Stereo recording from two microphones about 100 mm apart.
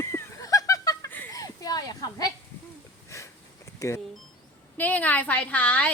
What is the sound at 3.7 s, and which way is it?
Speech, 30° left (ahead or behind).